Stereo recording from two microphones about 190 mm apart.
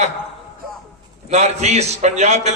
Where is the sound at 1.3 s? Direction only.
35° right (ahead or behind).